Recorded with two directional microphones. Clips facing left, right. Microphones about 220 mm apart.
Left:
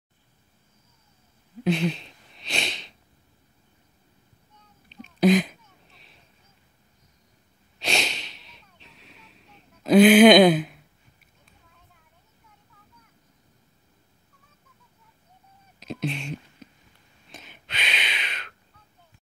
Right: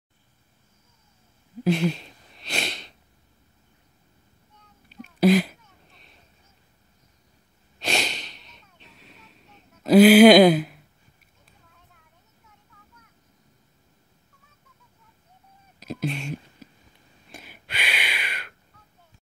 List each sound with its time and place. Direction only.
1.6 s wheeze: 5° right (ahead or behind)
4.8 s sneeze: 5° right (ahead or behind)
7.8 s snort: 5° right (ahead or behind)
15.8 s a sound: centre (ahead or behind)